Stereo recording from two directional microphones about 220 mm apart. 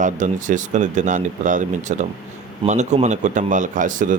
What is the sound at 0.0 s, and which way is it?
Speech, 35° right (ahead or behind).